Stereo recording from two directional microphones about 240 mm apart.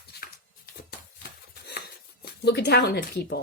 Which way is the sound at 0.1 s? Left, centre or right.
Left.